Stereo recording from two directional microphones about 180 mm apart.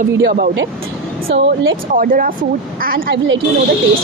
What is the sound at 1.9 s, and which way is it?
A woman's voice, 50° right (ahead or behind).